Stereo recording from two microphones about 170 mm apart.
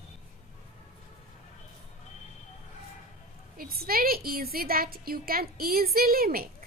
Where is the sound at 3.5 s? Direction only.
60° right (ahead or behind).